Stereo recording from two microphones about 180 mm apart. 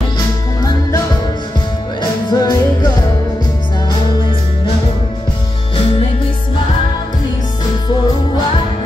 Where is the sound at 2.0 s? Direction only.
20° left (ahead or behind).